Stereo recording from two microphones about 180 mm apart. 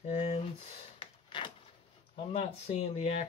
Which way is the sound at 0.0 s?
40° left (ahead or behind).